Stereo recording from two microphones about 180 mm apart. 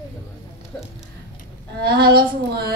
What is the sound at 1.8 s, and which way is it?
Speech, 60° right (ahead or behind).